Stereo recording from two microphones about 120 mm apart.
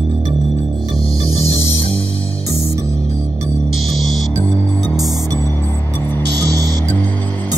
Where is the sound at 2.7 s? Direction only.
25° right (ahead or behind).